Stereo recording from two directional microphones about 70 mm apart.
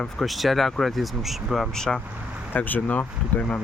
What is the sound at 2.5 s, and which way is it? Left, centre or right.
Speech, left.